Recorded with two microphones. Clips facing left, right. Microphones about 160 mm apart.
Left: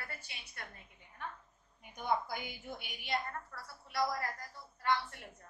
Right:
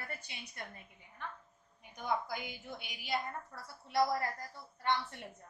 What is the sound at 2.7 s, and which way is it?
Speech, centre (ahead or behind).